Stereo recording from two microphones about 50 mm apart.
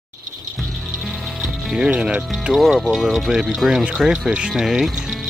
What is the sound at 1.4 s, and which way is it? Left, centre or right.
Speech, centre.